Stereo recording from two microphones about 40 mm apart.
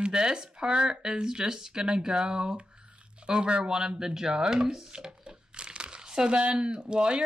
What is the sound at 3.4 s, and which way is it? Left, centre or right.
Speech, right.